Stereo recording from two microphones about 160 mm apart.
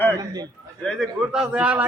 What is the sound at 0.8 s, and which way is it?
Speech, centre (ahead or behind).